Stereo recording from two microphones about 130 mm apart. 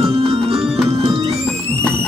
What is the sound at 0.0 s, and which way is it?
Music, 50° right (ahead or behind).